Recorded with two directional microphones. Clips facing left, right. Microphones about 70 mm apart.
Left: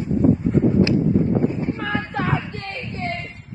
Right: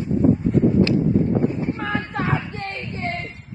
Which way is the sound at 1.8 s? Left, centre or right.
Centre.